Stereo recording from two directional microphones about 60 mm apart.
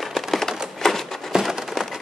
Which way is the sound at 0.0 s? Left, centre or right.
Centre.